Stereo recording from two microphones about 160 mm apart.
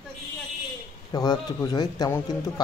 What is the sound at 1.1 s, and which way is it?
Speech, 25° left (ahead or behind).